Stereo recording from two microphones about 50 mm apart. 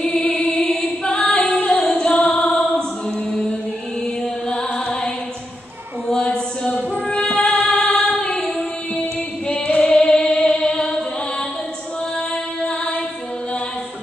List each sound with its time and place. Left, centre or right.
0.0 s music: centre
0.3 s singing: left
4.5 s music: centre
6.6 s music: left
9.5 s singing: left
9.9 s singing: centre
12.6 s music: centre